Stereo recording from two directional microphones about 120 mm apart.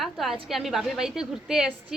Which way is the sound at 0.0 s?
Centre (ahead or behind).